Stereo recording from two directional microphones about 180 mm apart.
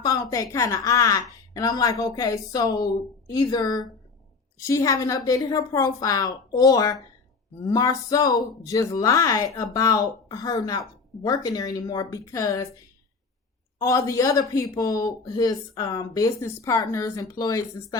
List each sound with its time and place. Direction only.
0.0 s speech: 20° left (ahead or behind)
13.7 s speech: 15° left (ahead or behind)